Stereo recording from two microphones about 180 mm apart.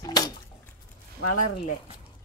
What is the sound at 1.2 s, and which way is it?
Speech, 50° left (ahead or behind).